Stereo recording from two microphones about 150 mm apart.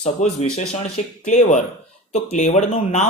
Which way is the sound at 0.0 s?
45° left (ahead or behind).